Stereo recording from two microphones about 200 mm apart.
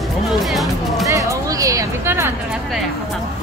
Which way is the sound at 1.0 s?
15° right (ahead or behind).